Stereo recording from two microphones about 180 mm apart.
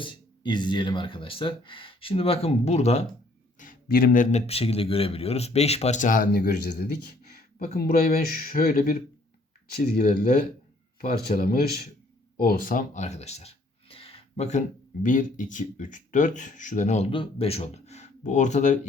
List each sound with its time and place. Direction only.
0.0 s speech: 25° left (ahead or behind)
3.6 s a man's voice: 50° left (ahead or behind)
7.8 s speech: 55° left (ahead or behind)
11.3 s speech: 55° left (ahead or behind)